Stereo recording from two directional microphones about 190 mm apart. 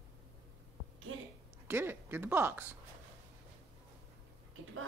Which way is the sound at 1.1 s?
90° right.